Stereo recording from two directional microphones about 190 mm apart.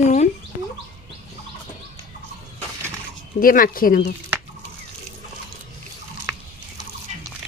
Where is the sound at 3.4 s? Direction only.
45° left (ahead or behind).